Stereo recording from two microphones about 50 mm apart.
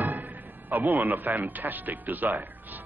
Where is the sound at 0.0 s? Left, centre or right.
Right.